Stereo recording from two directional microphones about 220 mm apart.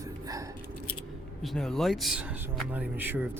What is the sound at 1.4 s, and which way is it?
Speech, centre (ahead or behind).